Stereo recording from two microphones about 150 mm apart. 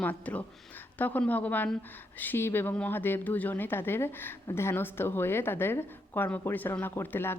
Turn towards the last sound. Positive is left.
turn(degrees=15)  # may be behind; listen again after turning